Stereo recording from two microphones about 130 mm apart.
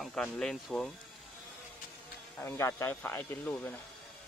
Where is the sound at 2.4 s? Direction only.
20° left (ahead or behind).